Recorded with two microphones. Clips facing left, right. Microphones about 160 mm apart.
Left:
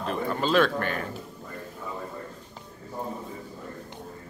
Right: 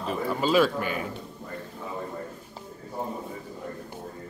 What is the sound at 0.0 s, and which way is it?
Speech, 5° right (ahead or behind).